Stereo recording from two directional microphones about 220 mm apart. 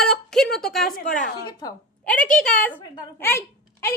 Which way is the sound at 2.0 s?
5° left (ahead or behind).